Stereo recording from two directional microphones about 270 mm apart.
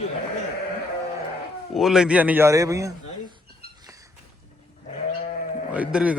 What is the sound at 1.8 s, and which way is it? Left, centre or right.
A man's voice, centre.